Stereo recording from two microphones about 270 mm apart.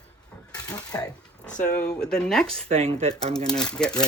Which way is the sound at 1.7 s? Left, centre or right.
Centre.